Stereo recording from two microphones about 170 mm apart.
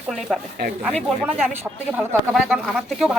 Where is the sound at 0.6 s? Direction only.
70° right (ahead or behind).